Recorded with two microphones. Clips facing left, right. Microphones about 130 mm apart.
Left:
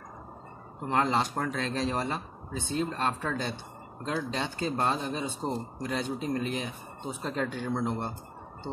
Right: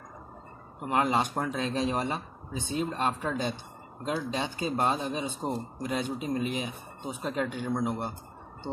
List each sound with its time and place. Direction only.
0.7 s speech: 15° right (ahead or behind)